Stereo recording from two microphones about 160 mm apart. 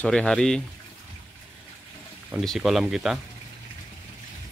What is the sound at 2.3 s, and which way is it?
Speech, centre (ahead or behind).